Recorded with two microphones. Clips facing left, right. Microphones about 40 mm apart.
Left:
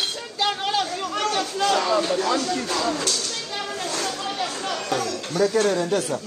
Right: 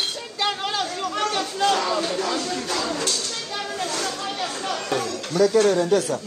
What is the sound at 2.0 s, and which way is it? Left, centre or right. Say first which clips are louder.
Speech: left 3 dB; left.